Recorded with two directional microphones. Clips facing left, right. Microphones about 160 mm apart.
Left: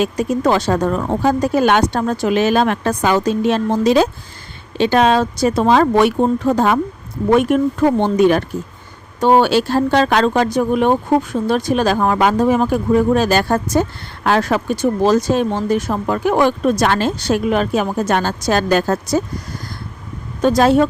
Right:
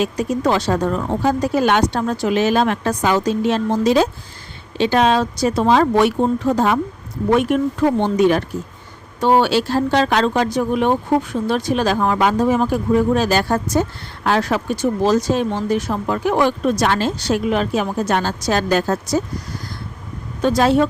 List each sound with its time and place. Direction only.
0.0 s speech: 50° left (ahead or behind); by 4.1 s 65° left (ahead or behind)
4.8 s speech: 55° left (ahead or behind)
20.4 s speech: 45° left (ahead or behind)